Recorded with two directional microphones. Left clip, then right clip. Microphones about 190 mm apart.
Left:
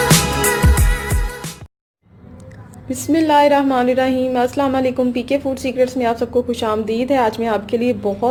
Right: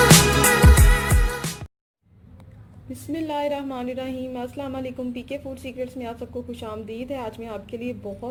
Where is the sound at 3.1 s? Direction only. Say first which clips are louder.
Left 14 dB; 5° left (ahead or behind).